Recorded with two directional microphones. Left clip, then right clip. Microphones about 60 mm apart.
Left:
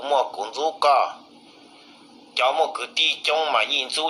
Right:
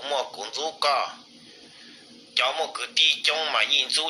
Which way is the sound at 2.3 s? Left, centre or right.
Left.